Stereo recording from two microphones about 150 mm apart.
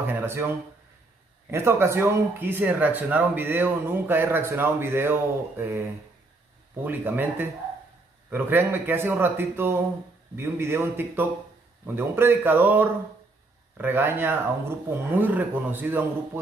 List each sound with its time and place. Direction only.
0.0 s a sound: 15° right (ahead or behind)
1.5 s speech: 15° right (ahead or behind)
6.8 s speech: 15° right (ahead or behind)